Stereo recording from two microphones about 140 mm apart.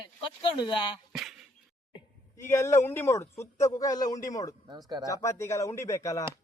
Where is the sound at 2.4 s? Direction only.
20° left (ahead or behind).